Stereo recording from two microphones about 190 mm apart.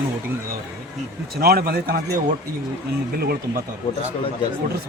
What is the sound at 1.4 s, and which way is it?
Speech, 55° right (ahead or behind).